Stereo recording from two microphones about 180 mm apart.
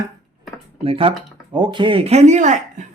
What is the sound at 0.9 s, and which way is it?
Speech, 30° right (ahead or behind).